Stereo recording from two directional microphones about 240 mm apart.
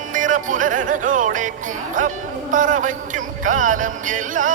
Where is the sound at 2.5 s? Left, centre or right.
Right.